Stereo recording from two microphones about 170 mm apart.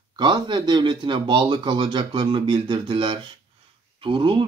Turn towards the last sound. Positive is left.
turn(degrees=-30)  # may be behind; listen again after turning